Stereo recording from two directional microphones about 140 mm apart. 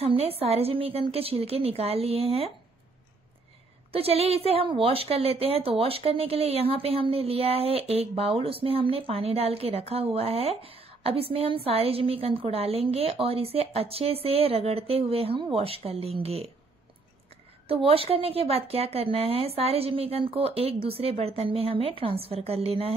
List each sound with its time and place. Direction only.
0.0 s a woman's voice: 45° right (ahead or behind)
3.9 s a woman's voice: 45° right (ahead or behind)
17.6 s a woman's voice: 45° right (ahead or behind)